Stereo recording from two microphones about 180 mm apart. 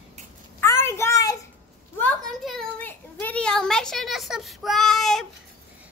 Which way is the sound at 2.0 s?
Centre (ahead or behind).